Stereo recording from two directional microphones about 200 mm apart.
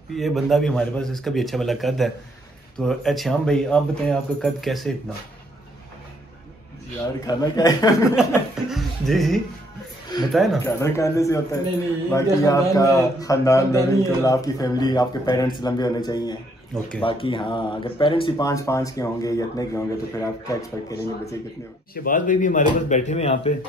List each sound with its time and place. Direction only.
0.1 s speech: centre (ahead or behind)
7.2 s speech: 20° left (ahead or behind)
8.2 s speech: centre (ahead or behind)
10.6 s speech: 15° left (ahead or behind)
21.9 s speech: 45° left (ahead or behind)